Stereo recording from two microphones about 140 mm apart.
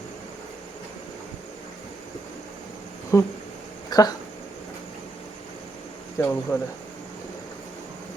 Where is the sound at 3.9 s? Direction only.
30° left (ahead or behind).